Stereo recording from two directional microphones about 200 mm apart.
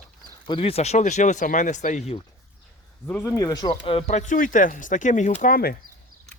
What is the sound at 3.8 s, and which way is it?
Speech, 30° left (ahead or behind).